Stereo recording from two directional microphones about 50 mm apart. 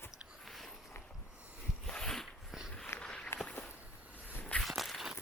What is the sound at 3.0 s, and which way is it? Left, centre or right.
Walk, left.